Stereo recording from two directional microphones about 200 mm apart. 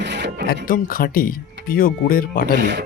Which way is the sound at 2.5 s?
60° right (ahead or behind).